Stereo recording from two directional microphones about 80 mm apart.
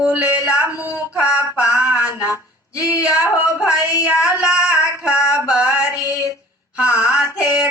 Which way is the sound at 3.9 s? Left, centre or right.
Left.